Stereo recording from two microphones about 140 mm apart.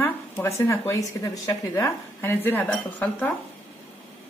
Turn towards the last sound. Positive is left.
turn(degrees=10)  # may be behind; listen again after turning